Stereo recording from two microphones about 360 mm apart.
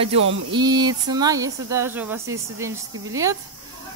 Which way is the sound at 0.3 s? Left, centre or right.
Centre.